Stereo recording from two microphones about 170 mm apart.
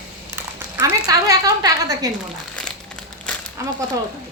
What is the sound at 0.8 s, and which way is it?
Speech, 20° right (ahead or behind).